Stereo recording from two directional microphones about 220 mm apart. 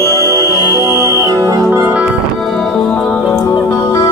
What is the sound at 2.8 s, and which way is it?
Music, 5° left (ahead or behind).